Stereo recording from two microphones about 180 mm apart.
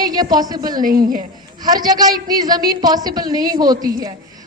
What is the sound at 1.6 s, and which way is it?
A woman's voice, 20° right (ahead or behind).